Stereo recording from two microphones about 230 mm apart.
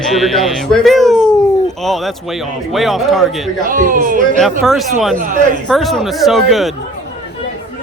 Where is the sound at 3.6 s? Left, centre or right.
Right.